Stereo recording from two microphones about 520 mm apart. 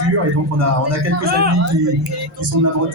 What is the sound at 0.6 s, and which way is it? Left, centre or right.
Speech, right.